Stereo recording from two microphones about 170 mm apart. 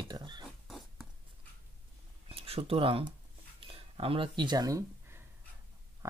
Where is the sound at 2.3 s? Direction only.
35° right (ahead or behind).